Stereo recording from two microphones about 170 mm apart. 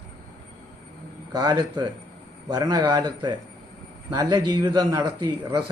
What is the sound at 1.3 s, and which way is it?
Speech, 25° right (ahead or behind).